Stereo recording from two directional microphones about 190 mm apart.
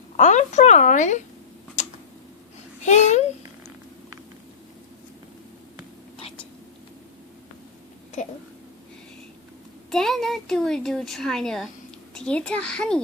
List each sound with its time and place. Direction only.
0.2 s a woman's voice: 40° left (ahead or behind)
1.8 s tick-tock: 40° left (ahead or behind)
2.8 s a woman's voice: 35° left (ahead or behind)
6.1 s whispering: 30° left (ahead or behind)
9.9 s speech: centre (ahead or behind)